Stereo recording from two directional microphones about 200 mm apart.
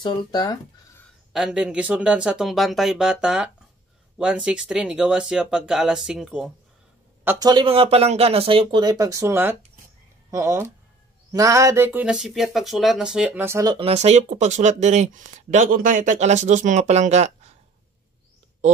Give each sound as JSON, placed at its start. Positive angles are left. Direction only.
{"t": 0.0, "sound": "speech", "side_deg": 20}
{"t": 1.3, "sound": "speech", "side_deg": -5}
{"t": 7.2, "sound": "speech", "side_deg": -20}
{"t": 13.7, "sound": "speech", "side_deg": -30}